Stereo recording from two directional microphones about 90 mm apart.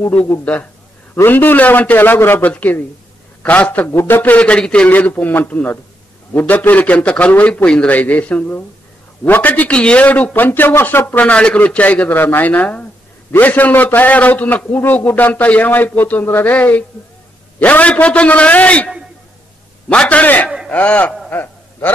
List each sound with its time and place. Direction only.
1.1 s a man's voice: 20° left (ahead or behind)
3.9 s speech: 35° left (ahead or behind)
4.2 s a man's voice: 15° left (ahead or behind)
19.9 s a man's voice: 15° left (ahead or behind)
21.3 s a sound: 25° left (ahead or behind)